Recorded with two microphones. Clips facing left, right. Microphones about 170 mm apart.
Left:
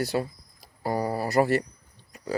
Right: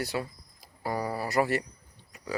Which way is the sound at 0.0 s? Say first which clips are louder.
Left 5 dB; 35° left (ahead or behind).